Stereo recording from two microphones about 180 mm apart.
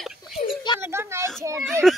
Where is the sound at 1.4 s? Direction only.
15° right (ahead or behind).